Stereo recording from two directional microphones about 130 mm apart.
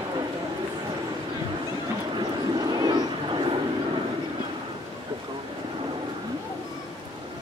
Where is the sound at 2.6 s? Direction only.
30° right (ahead or behind).